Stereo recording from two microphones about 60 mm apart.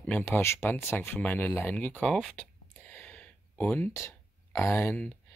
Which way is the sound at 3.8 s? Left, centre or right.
Left.